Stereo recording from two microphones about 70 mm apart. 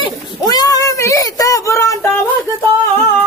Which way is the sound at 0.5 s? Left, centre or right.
Left.